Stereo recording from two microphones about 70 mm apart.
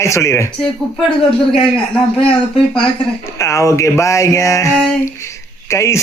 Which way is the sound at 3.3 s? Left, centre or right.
Left.